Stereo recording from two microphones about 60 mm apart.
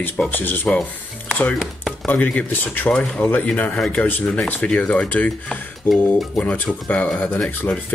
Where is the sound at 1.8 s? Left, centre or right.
Left.